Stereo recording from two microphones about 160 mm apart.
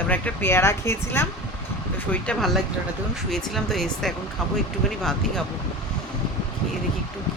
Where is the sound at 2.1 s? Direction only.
5° left (ahead or behind).